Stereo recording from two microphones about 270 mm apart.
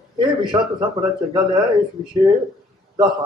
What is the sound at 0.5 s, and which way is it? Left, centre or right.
A man's voice, centre.